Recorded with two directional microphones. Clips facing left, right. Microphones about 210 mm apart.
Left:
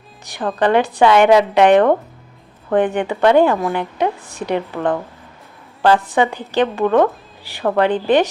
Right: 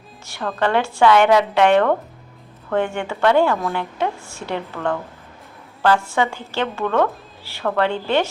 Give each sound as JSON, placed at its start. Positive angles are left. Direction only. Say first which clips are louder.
{"t": 0.3, "sound": "speech", "louder": "left 4 dB", "side_deg": 15}